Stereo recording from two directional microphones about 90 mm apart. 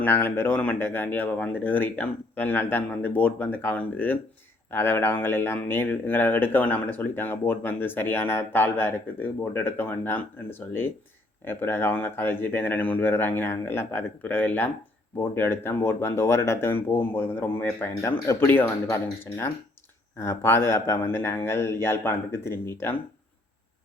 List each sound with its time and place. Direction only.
0.0 s speech: 20° left (ahead or behind)